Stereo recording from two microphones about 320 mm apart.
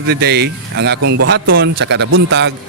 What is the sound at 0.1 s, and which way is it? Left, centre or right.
Speech, right.